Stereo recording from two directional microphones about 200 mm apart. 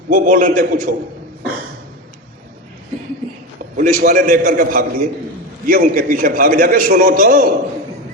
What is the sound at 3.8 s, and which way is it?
A man's voice, 40° right (ahead or behind).